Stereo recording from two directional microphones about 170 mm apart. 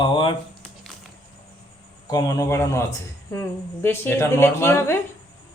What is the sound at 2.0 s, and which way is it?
Speech, 20° left (ahead or behind).